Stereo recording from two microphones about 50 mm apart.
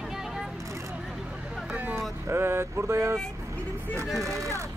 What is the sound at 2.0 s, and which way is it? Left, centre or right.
Vehicle, right.